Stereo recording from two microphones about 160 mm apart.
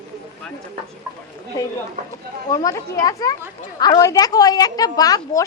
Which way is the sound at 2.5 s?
25° left (ahead or behind).